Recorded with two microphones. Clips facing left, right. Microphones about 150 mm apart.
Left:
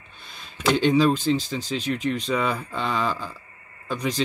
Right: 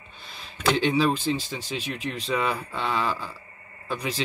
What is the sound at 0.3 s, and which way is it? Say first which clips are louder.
Speech: left 2 dB; centre (ahead or behind).